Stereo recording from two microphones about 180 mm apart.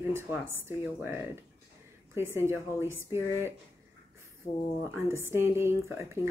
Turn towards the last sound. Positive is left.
turn(degrees=-15)  # may be behind; listen again after turning